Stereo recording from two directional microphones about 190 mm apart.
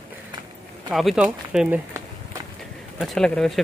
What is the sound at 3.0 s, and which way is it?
Speech, centre (ahead or behind).